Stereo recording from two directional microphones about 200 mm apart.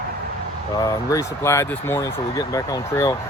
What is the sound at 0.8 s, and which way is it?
Speech, 15° left (ahead or behind).